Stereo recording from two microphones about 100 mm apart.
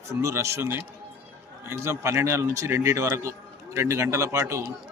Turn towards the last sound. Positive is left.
turn(degrees=-30)  # may be behind; listen again after turning